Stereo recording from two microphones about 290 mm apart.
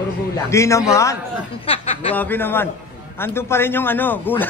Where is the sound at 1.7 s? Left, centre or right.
Centre.